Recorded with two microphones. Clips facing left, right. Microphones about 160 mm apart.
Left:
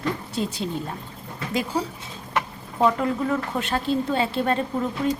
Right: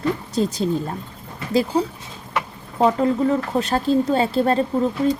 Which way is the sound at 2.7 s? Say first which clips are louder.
Right 4 dB; 30° right (ahead or behind).